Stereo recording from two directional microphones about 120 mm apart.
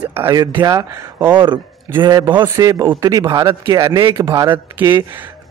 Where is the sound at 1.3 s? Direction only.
40° right (ahead or behind).